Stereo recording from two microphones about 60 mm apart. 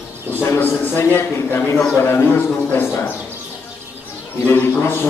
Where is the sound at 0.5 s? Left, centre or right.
Left.